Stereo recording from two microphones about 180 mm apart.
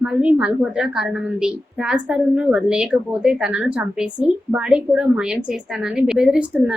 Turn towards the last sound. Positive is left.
turn(degrees=-5)  # may be behind; listen again after turning